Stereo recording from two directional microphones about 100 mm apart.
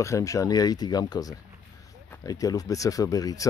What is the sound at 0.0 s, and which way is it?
Speech, 30° left (ahead or behind).